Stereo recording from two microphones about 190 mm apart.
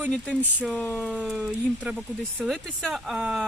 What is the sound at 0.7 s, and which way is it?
Speech, 5° left (ahead or behind).